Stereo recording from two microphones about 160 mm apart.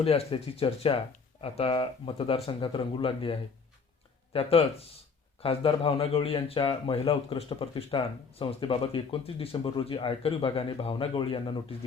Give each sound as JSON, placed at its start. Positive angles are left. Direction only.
{"t": 0.0, "sound": "speech", "side_deg": 40}